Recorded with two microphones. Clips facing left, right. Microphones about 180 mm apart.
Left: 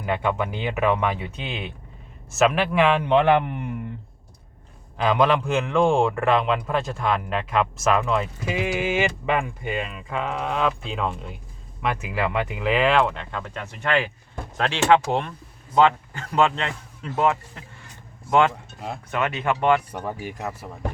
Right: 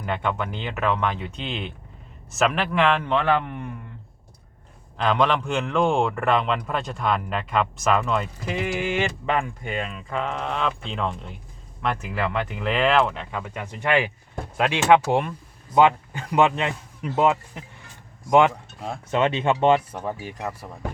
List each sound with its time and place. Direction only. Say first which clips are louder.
0.0 s speech: left 2 dB; 5° left (ahead or behind)
4.9 s a man's voice: left 2 dB; 5° left (ahead or behind); by 19.8 s 25° right (ahead or behind)
20.1 s speech: left 3 dB; 10° left (ahead or behind)